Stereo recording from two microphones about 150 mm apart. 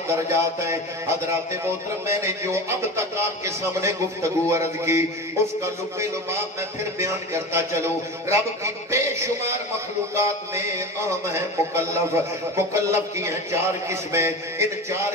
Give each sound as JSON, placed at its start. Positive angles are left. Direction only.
{"t": 0.3, "sound": "speech", "side_deg": -20}
{"t": 7.0, "sound": "speech", "side_deg": -20}